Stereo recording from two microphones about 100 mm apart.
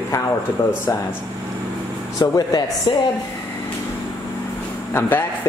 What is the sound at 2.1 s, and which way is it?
Speech, 40° left (ahead or behind).